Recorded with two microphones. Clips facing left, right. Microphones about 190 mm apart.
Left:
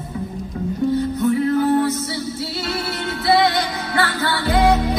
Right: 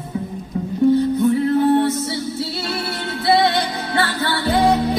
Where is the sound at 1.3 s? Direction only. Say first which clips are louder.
Even; 25° right (ahead or behind).